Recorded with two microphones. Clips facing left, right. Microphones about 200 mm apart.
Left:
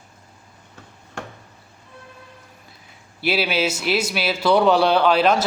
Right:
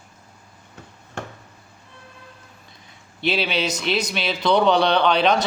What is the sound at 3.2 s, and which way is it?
A man's voice, 5° left (ahead or behind).